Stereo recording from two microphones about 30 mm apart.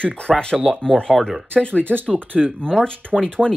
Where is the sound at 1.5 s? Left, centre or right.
Left.